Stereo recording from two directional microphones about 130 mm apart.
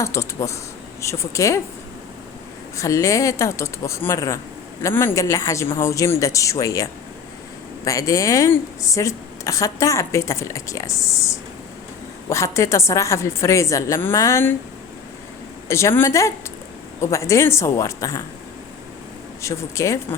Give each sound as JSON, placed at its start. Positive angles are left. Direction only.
{"t": 0.0, "sound": "speech", "side_deg": 20}
{"t": 2.7, "sound": "speech", "side_deg": 25}
{"t": 15.7, "sound": "speech", "side_deg": 20}
{"t": 19.4, "sound": "speech", "side_deg": 20}